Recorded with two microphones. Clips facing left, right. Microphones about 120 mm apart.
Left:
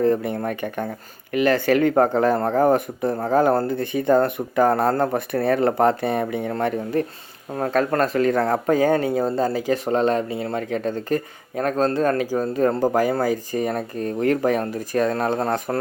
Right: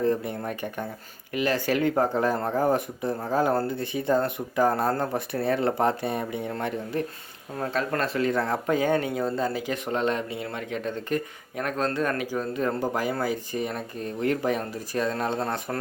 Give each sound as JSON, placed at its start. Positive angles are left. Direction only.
{"t": 0.0, "sound": "speech", "side_deg": 60}